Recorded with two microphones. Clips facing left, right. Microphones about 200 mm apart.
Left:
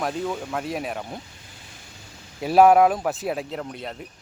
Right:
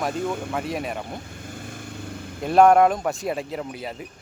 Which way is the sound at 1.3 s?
50° right (ahead or behind).